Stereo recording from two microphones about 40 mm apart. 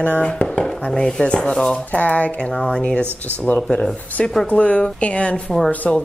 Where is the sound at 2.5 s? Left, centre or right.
Left.